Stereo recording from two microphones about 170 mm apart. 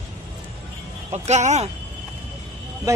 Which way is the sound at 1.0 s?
40° right (ahead or behind).